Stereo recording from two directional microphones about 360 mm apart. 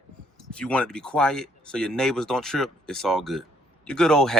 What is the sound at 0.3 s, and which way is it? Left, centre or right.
Speech, centre.